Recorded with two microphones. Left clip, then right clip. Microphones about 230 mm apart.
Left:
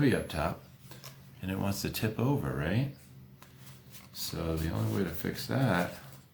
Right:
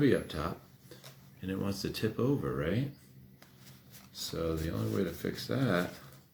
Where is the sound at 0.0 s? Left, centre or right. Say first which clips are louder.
Even; left.